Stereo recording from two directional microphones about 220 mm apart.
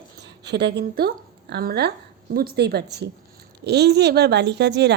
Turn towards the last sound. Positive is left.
turn(degrees=-50)  # may be behind; listen again after turning